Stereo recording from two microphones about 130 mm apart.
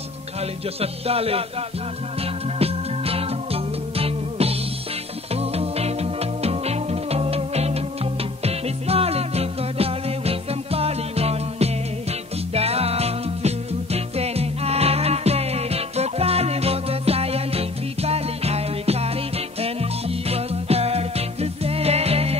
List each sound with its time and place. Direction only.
0.7 s music: 50° right (ahead or behind)
2.6 s music: 50° right (ahead or behind)